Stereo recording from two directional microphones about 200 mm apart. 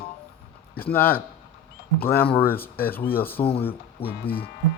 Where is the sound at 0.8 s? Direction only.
10° left (ahead or behind).